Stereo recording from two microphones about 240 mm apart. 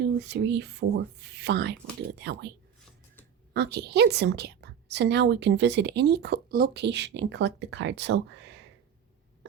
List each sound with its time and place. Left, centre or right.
0.0 s a woman's voice: right
3.5 s a woman's voice: right